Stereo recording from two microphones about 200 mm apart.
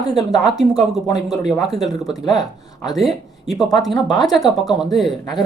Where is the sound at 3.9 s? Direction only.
20° left (ahead or behind).